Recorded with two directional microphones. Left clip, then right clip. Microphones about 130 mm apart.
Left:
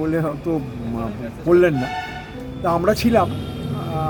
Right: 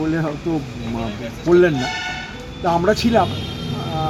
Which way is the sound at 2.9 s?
40° left (ahead or behind).